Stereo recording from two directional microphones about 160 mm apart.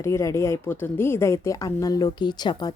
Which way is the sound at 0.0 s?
20° left (ahead or behind).